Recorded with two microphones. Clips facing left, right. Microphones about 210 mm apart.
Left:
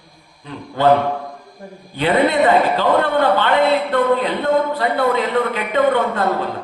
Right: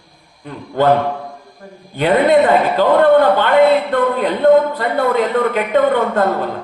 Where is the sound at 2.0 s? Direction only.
50° right (ahead or behind).